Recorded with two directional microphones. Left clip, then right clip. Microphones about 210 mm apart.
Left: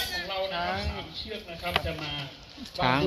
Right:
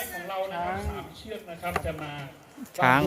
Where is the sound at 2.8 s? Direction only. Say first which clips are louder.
Right 5 dB; 15° right (ahead or behind).